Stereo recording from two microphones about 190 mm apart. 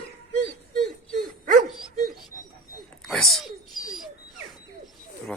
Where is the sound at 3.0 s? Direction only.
Centre (ahead or behind).